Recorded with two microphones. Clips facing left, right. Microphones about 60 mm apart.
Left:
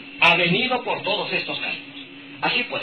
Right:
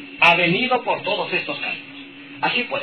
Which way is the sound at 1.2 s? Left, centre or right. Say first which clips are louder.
Right 2 dB; right.